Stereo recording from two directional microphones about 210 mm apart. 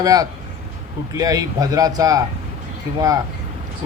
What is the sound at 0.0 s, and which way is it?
Speech, 15° right (ahead or behind).